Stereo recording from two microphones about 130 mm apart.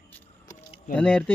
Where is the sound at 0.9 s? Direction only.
10° left (ahead or behind).